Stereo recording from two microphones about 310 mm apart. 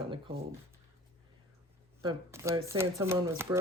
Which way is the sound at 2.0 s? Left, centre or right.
Centre.